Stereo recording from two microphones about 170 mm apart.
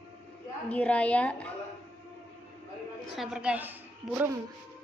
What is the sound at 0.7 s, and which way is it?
Speech, 10° left (ahead or behind).